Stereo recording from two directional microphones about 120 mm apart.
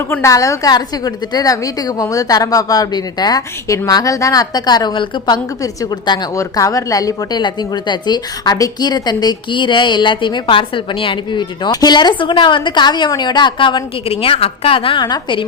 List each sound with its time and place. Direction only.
0.1 s a woman's voice: 25° left (ahead or behind); by 14.1 s 45° left (ahead or behind)
14.1 s a woman's voice: 55° left (ahead or behind); by 15.4 s 40° left (ahead or behind)